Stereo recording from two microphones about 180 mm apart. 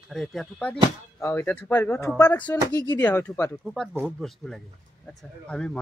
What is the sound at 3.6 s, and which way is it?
Speech, centre (ahead or behind).